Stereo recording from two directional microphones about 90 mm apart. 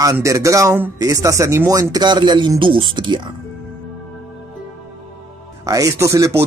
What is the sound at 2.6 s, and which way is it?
Speech, 70° right (ahead or behind).